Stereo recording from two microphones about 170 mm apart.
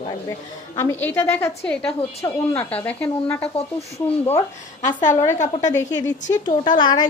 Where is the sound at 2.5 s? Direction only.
10° left (ahead or behind).